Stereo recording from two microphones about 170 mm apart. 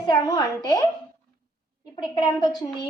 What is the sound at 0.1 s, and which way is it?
Speech, 20° left (ahead or behind).